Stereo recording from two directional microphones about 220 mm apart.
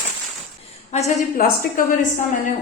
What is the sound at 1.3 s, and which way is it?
Speech, 40° left (ahead or behind).